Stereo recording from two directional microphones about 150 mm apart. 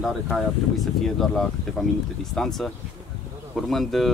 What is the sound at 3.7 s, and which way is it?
Speech, centre (ahead or behind).